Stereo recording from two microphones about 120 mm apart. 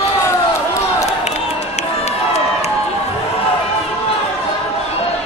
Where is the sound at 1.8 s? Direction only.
65° left (ahead or behind).